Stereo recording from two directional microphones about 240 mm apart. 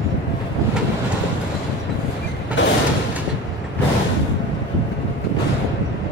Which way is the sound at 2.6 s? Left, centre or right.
Left.